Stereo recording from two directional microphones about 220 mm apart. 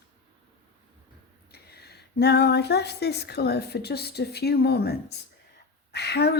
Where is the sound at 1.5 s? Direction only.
45° left (ahead or behind).